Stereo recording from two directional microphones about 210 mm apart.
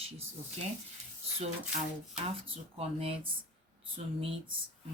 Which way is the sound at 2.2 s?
30° right (ahead or behind).